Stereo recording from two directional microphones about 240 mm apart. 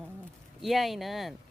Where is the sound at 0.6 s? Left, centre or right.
Centre.